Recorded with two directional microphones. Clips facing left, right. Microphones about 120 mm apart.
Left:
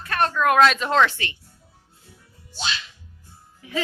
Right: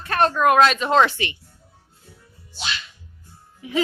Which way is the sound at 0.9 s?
15° right (ahead or behind).